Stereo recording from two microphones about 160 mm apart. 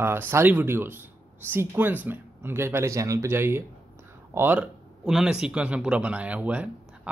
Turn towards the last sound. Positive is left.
turn(degrees=-10)  # may be behind; listen again after turning